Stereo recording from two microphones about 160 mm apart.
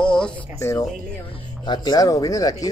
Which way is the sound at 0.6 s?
20° left (ahead or behind).